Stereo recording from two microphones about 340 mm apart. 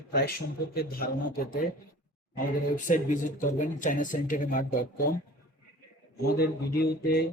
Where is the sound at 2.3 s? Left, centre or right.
Left.